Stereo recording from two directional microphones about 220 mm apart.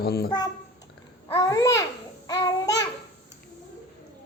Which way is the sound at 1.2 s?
15° left (ahead or behind).